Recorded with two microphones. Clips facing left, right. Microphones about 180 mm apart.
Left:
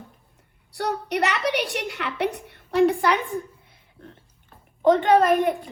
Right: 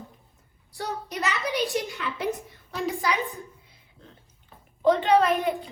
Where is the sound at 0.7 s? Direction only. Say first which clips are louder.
Left 7 dB; 70° left (ahead or behind).